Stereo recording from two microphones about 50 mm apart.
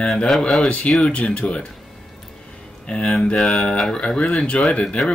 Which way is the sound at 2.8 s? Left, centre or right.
Left.